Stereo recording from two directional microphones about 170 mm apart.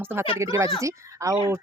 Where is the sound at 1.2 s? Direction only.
20° right (ahead or behind).